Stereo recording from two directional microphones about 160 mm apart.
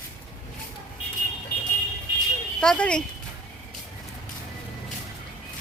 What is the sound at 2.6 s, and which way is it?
Speech, 5° left (ahead or behind).